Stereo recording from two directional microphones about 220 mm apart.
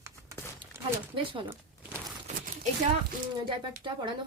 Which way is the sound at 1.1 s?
20° right (ahead or behind).